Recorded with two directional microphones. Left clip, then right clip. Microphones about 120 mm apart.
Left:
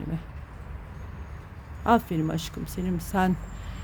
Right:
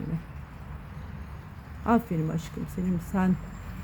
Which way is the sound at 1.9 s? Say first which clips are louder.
Left 4 dB; 30° left (ahead or behind).